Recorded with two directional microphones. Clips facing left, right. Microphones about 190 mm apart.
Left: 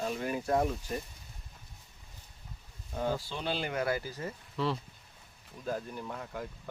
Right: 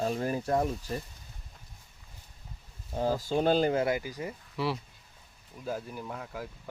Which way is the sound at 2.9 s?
35° right (ahead or behind).